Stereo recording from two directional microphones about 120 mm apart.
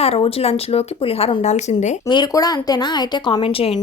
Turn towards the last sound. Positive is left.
turn(degrees=50)  # may be behind; listen again after turning